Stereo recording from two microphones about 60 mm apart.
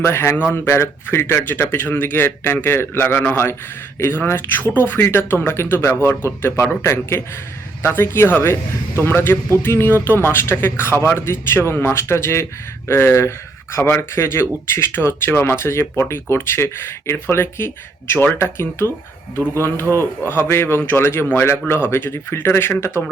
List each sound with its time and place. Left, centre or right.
0.0 s a man's voice: left
3.9 s a man's voice: left
19.9 s a man's voice: left